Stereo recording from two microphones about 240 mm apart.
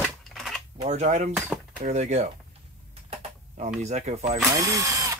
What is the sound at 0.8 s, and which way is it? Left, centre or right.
Speech, right.